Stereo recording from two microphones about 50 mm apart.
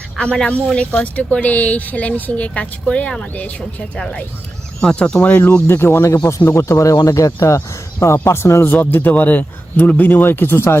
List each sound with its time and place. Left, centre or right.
0.2 s speech: centre
3.3 s a man's voice: left
3.9 s speech: left
5.2 s a man's voice: left
5.6 s speech: left
6.5 s speech: left
8.2 s speech: left
8.6 s a man's voice: left